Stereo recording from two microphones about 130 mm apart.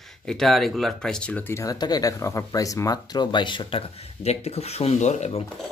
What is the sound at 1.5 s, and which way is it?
Speech, 25° left (ahead or behind).